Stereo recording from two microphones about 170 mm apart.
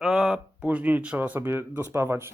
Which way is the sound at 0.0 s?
Centre (ahead or behind).